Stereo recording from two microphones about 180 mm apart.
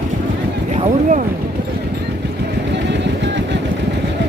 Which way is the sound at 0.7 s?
45° right (ahead or behind).